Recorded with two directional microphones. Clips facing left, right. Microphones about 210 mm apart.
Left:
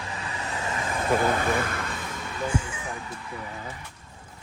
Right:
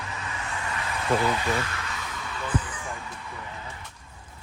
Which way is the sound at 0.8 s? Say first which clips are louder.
Left 4 dB; 45° left (ahead or behind).